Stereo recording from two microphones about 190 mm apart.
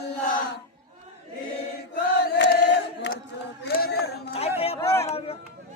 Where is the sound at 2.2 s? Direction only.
60° left (ahead or behind).